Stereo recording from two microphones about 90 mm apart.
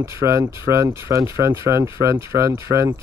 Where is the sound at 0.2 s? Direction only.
30° right (ahead or behind).